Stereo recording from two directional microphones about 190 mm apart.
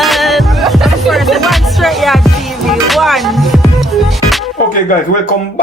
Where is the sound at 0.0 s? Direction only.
Centre (ahead or behind).